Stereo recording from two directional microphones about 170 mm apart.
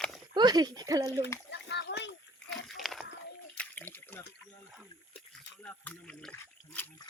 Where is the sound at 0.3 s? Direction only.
25° right (ahead or behind).